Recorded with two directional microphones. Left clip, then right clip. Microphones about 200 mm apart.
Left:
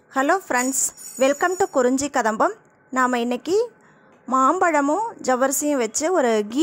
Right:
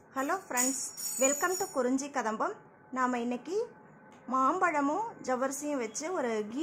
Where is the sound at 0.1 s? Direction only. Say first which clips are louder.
Left 13 dB; 40° left (ahead or behind).